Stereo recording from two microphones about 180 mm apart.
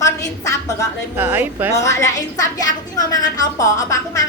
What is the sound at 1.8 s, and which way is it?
A woman's voice, 15° left (ahead or behind).